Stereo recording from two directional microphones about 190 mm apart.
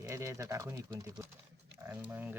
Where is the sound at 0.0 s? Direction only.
15° right (ahead or behind).